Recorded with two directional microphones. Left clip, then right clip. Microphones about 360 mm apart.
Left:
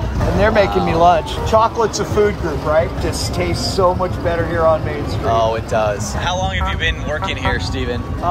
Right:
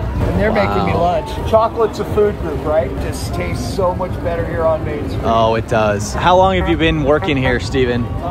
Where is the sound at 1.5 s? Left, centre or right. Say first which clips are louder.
Right 1 dB; left.